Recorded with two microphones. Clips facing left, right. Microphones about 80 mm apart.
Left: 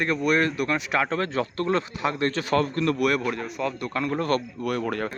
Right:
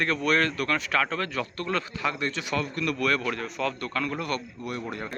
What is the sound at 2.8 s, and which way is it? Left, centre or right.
Speech, left.